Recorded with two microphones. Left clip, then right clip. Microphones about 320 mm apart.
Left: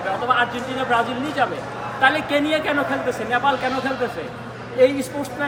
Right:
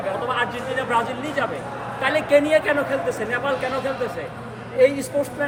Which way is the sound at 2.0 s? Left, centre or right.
Centre.